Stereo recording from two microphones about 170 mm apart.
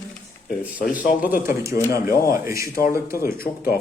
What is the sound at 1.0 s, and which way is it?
Speech, 55° left (ahead or behind).